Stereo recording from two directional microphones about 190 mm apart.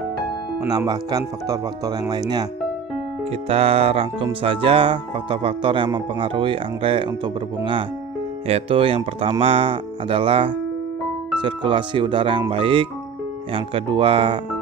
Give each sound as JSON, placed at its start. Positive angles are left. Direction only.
{"t": 0.7, "sound": "speech", "side_deg": -20}
{"t": 3.4, "sound": "speech", "side_deg": -30}
{"t": 8.5, "sound": "speech", "side_deg": -30}